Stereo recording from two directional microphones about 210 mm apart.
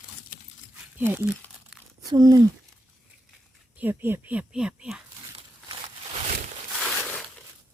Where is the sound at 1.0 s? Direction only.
10° right (ahead or behind).